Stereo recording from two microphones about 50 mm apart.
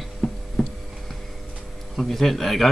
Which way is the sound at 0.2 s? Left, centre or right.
Centre.